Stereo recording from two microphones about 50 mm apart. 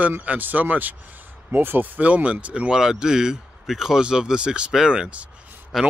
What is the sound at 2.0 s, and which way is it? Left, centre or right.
Speech, right.